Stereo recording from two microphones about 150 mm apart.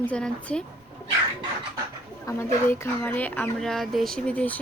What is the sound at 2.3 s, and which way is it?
Speech, 20° left (ahead or behind).